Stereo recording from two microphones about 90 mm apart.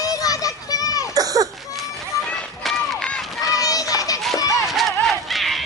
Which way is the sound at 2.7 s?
5° left (ahead or behind).